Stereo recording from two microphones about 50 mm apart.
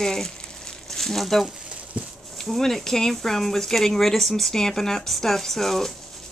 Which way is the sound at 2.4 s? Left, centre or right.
Centre.